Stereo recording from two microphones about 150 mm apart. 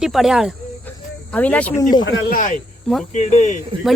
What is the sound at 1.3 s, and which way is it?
Speech, 10° left (ahead or behind).